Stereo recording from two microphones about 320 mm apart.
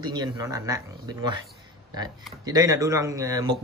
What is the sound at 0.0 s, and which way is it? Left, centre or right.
Speech, centre.